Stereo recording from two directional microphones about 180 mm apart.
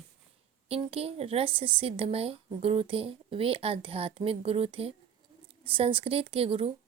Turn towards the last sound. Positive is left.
turn(degrees=-30)  # may be behind; listen again after turning